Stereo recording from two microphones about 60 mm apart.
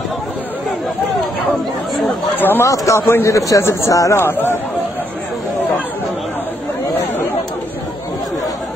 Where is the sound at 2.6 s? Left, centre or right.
Left.